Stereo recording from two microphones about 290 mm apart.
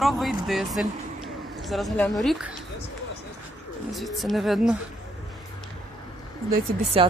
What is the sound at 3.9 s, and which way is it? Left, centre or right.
Speech, centre.